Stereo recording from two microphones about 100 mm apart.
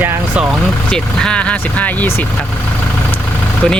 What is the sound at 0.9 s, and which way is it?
Speech, 10° left (ahead or behind).